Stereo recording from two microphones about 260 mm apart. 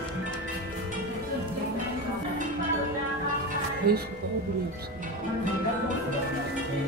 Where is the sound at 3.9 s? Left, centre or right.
Right.